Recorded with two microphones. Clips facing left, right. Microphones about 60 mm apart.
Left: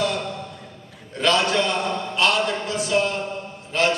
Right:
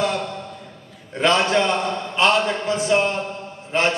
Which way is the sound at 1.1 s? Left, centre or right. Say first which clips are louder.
Right 2 dB; right.